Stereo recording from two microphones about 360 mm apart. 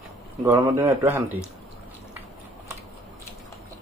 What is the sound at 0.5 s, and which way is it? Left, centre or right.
Speech, centre.